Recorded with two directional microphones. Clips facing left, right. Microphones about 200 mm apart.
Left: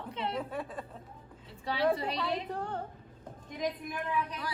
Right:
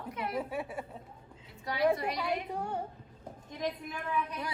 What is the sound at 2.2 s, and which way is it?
Speech, 25° left (ahead or behind).